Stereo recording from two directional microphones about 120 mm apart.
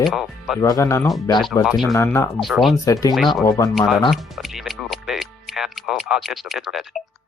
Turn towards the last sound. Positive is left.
turn(degrees=0)  # may be behind; listen again after turning